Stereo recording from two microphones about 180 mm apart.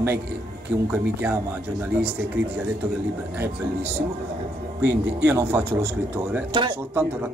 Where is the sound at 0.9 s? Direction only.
10° right (ahead or behind).